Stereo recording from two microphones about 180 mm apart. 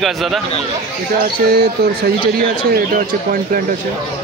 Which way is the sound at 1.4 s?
60° right (ahead or behind).